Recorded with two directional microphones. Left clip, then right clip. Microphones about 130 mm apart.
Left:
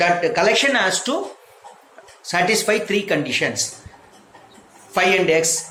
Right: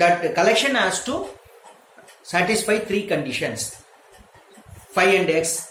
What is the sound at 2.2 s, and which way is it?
Speech, 40° left (ahead or behind).